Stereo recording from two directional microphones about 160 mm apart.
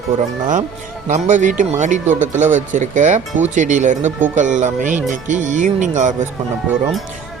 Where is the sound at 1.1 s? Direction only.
50° right (ahead or behind).